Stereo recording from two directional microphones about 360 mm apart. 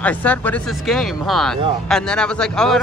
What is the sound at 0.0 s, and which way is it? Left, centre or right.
Speech, centre.